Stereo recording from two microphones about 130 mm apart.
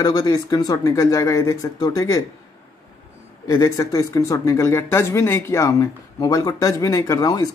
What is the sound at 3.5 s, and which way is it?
Speech, 25° left (ahead or behind).